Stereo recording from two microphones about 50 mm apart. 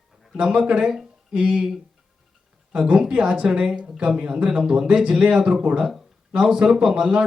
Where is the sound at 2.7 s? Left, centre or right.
Centre.